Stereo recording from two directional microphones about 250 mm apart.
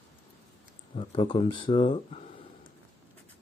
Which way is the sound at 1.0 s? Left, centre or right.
Left.